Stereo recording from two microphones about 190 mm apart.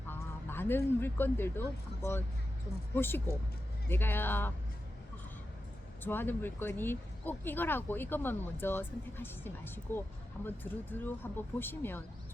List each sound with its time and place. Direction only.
0.1 s speech: 10° left (ahead or behind)
6.0 s speech: 10° left (ahead or behind)